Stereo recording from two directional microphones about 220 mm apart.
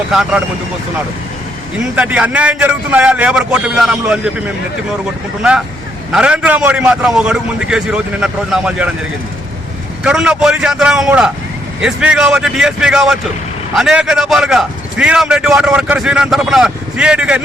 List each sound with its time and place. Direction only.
0.1 s a man's voice: centre (ahead or behind)
2.0 s a man's voice: 5° right (ahead or behind)
10.0 s a man's voice: 5° right (ahead or behind)